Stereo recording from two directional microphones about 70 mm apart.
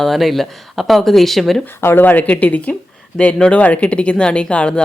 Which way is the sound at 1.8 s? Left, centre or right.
Left.